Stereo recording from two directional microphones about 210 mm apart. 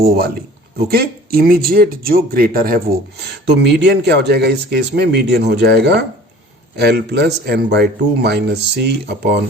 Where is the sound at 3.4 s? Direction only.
55° right (ahead or behind).